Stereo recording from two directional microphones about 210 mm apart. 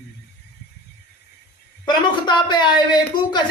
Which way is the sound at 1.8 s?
20° left (ahead or behind).